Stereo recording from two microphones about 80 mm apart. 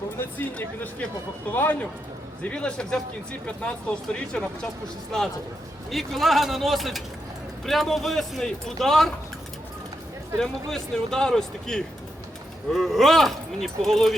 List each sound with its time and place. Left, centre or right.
0.2 s speech: left
5.9 s speech: centre
10.4 s speech: centre